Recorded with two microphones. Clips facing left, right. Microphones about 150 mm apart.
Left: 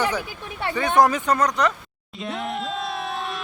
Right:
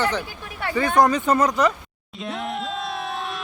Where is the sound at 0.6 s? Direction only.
25° left (ahead or behind).